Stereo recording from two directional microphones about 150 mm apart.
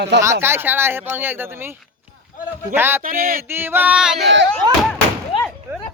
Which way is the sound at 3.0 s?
70° right (ahead or behind).